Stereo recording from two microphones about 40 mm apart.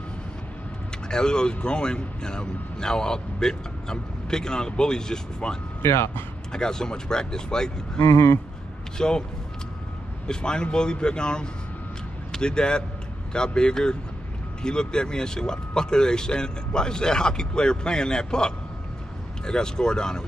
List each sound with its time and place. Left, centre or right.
1.0 s speech: centre
5.8 s speech: left
6.5 s speech: centre
10.2 s speech: left